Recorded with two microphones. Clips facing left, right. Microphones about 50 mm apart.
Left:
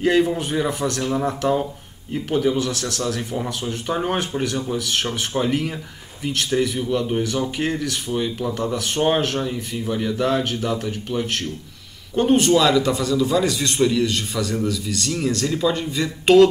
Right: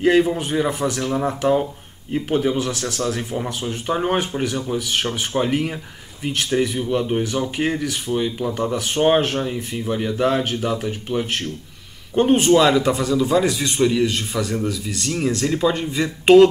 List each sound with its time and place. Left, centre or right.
0.0 s speech: centre